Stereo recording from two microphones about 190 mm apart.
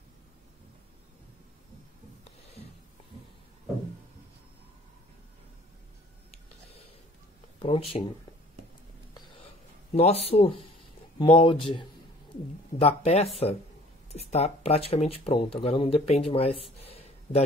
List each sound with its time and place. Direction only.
7.5 s speech: 30° left (ahead or behind)
9.9 s speech: 35° left (ahead or behind)
16.8 s a sound: 30° left (ahead or behind)